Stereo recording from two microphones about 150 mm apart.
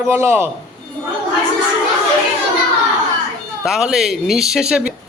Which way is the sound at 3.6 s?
5° right (ahead or behind).